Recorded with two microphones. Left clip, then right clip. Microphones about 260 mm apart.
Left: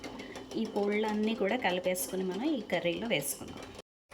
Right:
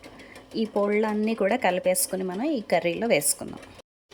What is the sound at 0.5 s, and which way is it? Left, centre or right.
A woman's voice, centre.